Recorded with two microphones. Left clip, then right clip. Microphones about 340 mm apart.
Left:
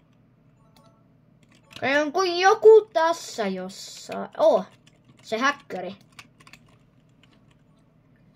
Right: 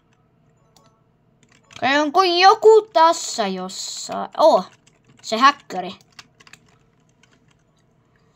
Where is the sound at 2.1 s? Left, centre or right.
Right.